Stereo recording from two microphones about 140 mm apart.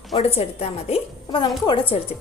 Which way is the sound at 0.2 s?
45° left (ahead or behind).